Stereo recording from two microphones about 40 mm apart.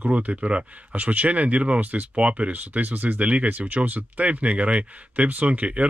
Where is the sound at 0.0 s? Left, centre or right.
Right.